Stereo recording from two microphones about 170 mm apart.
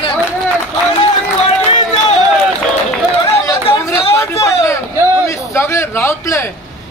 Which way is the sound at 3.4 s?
15° left (ahead or behind).